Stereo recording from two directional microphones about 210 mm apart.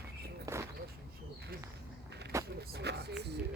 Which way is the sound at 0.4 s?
15° right (ahead or behind).